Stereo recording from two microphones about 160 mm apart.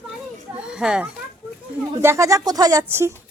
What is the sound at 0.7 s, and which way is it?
Speech, 5° right (ahead or behind).